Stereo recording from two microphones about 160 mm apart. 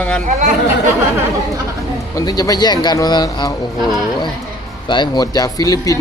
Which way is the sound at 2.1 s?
25° left (ahead or behind).